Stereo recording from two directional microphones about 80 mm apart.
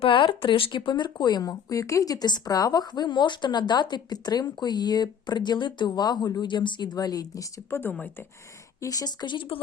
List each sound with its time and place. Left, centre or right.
0.1 s speech: left
7.7 s speech: left
8.8 s speech: left
9.2 s speech: left